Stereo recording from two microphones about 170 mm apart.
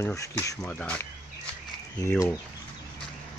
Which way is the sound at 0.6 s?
10° left (ahead or behind).